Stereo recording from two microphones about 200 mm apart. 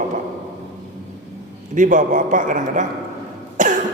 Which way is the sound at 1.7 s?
40° right (ahead or behind).